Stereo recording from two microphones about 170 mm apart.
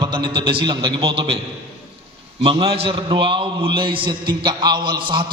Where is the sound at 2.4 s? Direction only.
30° right (ahead or behind).